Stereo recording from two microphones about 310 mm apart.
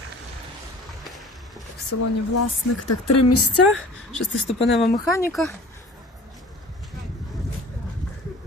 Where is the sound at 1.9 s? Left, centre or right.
Left.